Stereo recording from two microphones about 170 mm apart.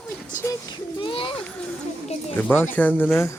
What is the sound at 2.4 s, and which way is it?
Speech, 10° left (ahead or behind).